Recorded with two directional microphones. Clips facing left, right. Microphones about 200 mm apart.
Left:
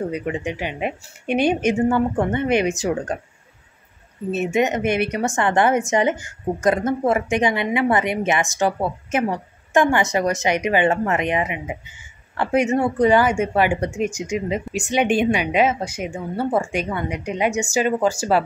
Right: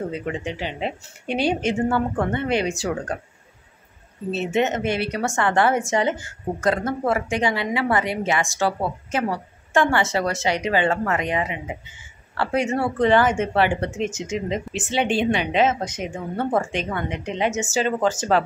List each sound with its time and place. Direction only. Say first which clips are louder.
0.1 s speech: left 3 dB; 15° left (ahead or behind)
4.3 s a woman's voice: left 2 dB; 15° left (ahead or behind)